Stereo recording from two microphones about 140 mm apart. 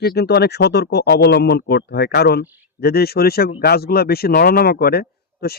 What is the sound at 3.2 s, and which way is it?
A man's voice, 90° left.